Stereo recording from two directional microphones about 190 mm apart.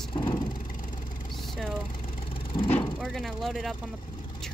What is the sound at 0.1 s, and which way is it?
Vehicle, 25° left (ahead or behind).